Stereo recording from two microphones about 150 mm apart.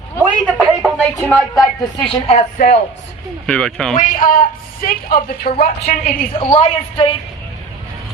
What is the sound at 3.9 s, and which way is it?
A man's voice, 65° left (ahead or behind).